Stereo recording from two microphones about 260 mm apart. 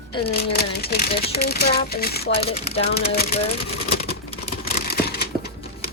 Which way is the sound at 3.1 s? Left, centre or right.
Left.